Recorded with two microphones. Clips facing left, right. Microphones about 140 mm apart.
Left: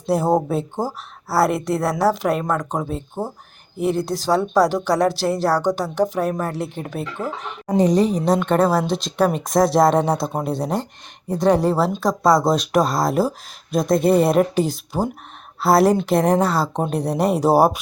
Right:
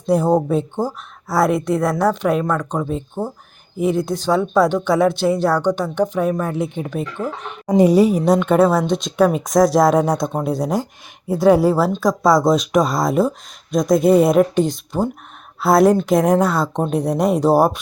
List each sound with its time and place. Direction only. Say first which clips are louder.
0.0 s speech: right 2 dB; 5° left (ahead or behind)
7.8 s a woman's voice: right 4 dB; 10° right (ahead or behind); by 17.7 s 10° left (ahead or behind)